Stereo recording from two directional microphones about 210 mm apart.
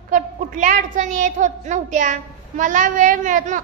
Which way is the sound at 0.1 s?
40° right (ahead or behind).